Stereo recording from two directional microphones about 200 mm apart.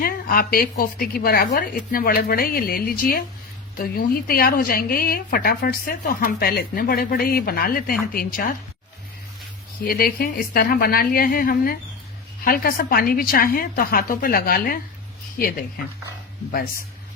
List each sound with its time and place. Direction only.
0.0 s a woman's voice: 45° left (ahead or behind)
9.8 s a woman's voice: 50° left (ahead or behind)